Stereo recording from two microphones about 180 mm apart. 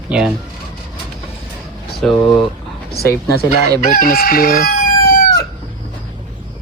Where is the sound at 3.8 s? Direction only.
50° left (ahead or behind).